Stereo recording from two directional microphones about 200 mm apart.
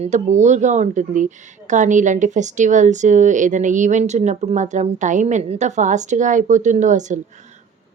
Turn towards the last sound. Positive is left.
turn(degrees=-35)  # may be behind; listen again after turning